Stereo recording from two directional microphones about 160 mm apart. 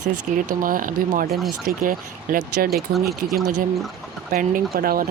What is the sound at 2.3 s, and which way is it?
Speech, 70° right (ahead or behind).